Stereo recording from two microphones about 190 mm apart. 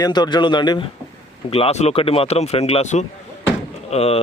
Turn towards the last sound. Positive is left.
turn(degrees=30)  # may be behind; listen again after turning